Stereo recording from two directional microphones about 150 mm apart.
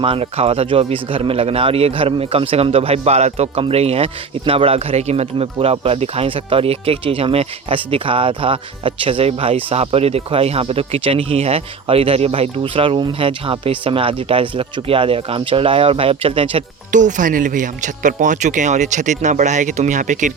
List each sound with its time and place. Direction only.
0.0 s speech: 40° right (ahead or behind)
16.9 s speech: 55° right (ahead or behind)